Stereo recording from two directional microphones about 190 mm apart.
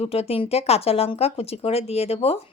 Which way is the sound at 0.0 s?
30° left (ahead or behind).